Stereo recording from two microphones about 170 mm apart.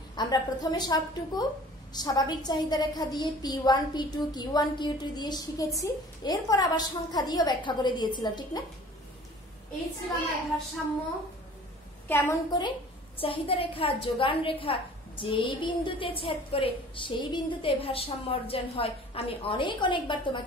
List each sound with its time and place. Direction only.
0.1 s a woman's voice: 25° left (ahead or behind)
12.1 s a woman's voice: 15° left (ahead or behind)
12.4 s a woman's voice: 25° left (ahead or behind)